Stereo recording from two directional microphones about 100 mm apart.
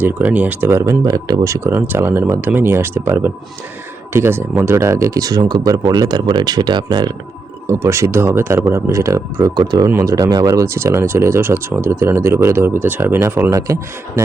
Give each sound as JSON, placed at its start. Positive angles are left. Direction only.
{"t": 0.0, "sound": "speech", "side_deg": -15}
{"t": 1.0, "sound": "speech", "side_deg": -45}
{"t": 1.5, "sound": "speech", "side_deg": -30}
{"t": 7.7, "sound": "speech", "side_deg": -30}